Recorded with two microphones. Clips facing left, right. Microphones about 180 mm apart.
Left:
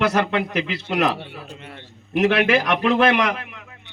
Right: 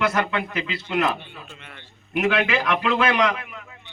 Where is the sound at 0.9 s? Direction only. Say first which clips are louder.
Left 1 dB; 75° left (ahead or behind).